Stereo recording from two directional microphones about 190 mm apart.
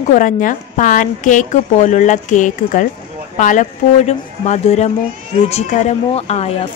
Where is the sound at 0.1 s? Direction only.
45° left (ahead or behind).